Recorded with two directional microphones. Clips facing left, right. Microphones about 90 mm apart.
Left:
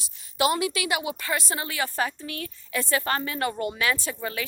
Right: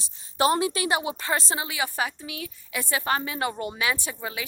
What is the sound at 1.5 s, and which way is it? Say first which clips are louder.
A woman's voice: even; 15° right (ahead or behind).